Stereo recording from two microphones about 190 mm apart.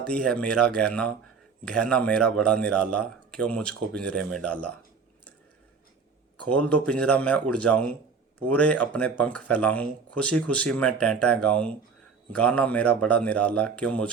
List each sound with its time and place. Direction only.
0.0 s speech: 5° left (ahead or behind)
6.5 s speech: 5° left (ahead or behind)